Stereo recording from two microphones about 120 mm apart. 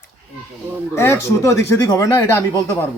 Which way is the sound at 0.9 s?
20° left (ahead or behind).